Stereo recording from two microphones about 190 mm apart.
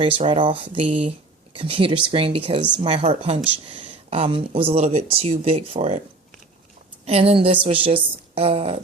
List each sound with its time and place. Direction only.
0.2 s a woman's voice: 25° right (ahead or behind)
7.0 s a woman's voice: 35° right (ahead or behind)